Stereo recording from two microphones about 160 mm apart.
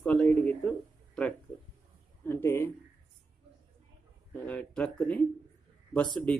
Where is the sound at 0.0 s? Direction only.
5° left (ahead or behind).